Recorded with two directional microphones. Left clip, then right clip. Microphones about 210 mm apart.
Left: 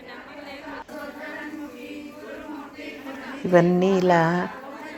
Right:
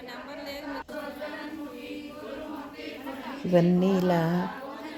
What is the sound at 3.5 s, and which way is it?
Speech, 5° right (ahead or behind).